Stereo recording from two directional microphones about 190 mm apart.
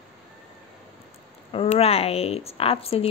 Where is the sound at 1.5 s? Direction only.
35° left (ahead or behind).